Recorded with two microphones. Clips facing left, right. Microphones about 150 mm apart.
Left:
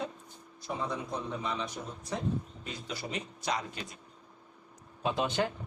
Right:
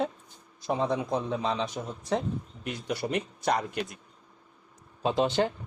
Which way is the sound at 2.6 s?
65° right (ahead or behind).